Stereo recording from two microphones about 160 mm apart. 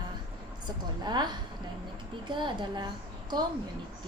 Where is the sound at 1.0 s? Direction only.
25° right (ahead or behind).